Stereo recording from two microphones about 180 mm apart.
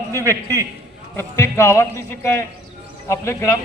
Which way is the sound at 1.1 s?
15° left (ahead or behind).